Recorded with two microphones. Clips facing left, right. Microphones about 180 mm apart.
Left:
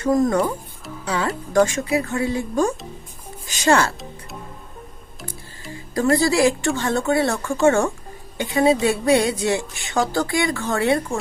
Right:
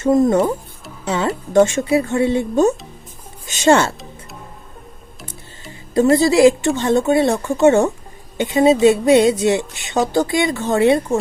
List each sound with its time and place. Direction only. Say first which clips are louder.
0.0 s speech: right 4 dB; 25° right (ahead or behind)
5.7 s speech: right 5 dB; 20° right (ahead or behind)